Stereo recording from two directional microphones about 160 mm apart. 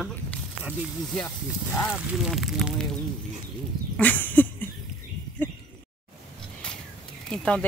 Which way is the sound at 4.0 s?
10° left (ahead or behind).